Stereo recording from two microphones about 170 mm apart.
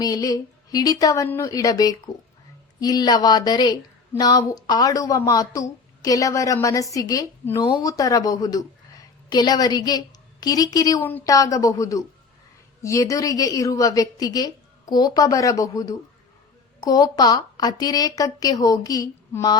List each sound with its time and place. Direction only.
0.0 s a woman's voice: 20° left (ahead or behind)